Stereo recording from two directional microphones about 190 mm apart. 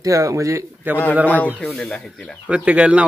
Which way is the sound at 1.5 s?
Centre (ahead or behind).